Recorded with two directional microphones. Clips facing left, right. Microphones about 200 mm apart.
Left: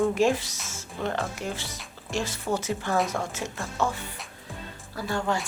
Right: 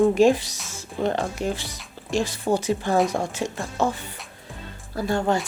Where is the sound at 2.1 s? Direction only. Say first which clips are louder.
Right 6 dB; 15° right (ahead or behind).